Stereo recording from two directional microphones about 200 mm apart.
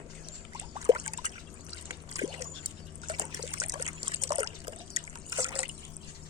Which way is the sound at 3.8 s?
30° right (ahead or behind).